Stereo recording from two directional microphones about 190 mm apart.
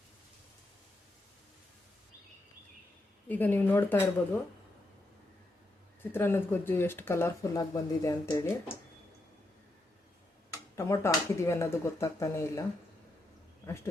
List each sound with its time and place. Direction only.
3.2 s speech: 10° left (ahead or behind)
6.1 s speech: 10° left (ahead or behind)
11.0 s speech: 15° left (ahead or behind)